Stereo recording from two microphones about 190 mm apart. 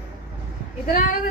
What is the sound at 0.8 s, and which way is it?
Speech, 50° left (ahead or behind).